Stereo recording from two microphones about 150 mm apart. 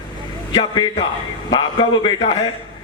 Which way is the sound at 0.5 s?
30° left (ahead or behind).